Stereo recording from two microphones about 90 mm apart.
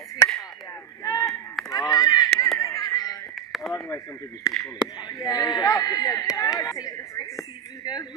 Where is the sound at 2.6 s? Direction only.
35° left (ahead or behind).